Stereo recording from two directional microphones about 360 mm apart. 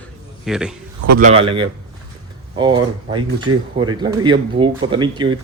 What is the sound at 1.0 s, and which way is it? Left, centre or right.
Speech, right.